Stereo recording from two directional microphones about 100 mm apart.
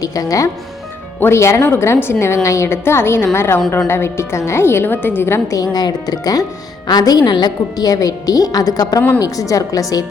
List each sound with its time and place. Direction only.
0.0 s a woman's voice: 35° left (ahead or behind)
5.5 s a woman's voice: 40° left (ahead or behind)